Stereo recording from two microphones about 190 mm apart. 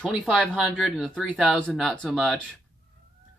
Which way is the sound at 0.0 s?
Centre (ahead or behind).